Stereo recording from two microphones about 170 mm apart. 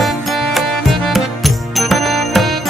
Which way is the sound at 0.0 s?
Centre (ahead or behind).